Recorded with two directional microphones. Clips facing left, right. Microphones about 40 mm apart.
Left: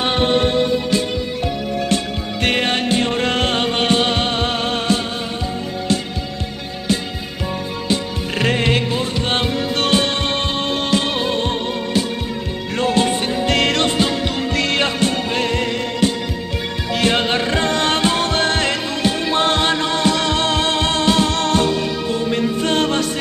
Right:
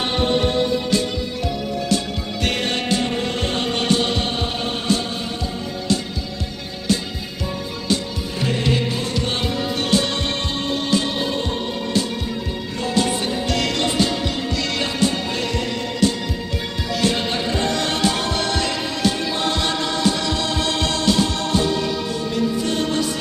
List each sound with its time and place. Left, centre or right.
2.4 s music: left
3.2 s music: left
3.7 s music: left
4.3 s music: left
8.4 s music: left
9.8 s music: left
12.7 s music: left
22.1 s music: left